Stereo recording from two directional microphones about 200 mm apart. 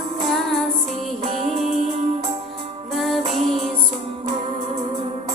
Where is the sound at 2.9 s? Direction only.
Centre (ahead or behind).